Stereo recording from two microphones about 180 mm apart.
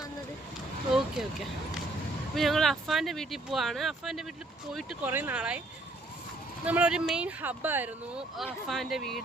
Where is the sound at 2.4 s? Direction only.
Centre (ahead or behind).